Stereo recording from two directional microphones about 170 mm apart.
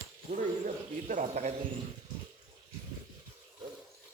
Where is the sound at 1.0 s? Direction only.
45° right (ahead or behind).